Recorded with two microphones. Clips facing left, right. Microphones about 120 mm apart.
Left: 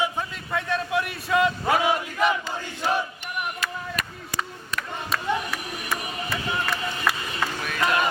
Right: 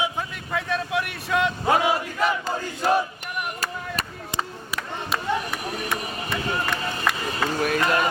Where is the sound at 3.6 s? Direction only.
30° right (ahead or behind).